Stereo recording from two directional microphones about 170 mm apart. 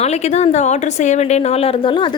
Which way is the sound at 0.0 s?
40° left (ahead or behind).